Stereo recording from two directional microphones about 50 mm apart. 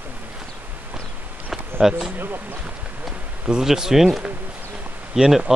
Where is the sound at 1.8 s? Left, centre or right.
Centre.